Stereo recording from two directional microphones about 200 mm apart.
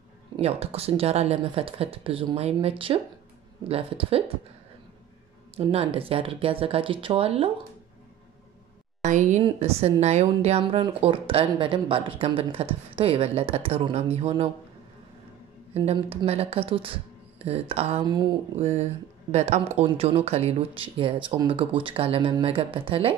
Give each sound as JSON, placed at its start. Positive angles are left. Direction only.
{"t": 0.4, "sound": "a woman's voice", "side_deg": -30}
{"t": 5.7, "sound": "a woman's voice", "side_deg": -30}
{"t": 9.0, "sound": "a woman's voice", "side_deg": -35}
{"t": 15.7, "sound": "a woman's voice", "side_deg": -30}
{"t": 18.6, "sound": "a woman's voice", "side_deg": -30}